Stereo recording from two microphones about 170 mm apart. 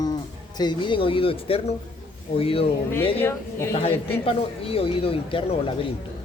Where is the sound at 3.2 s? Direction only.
15° left (ahead or behind).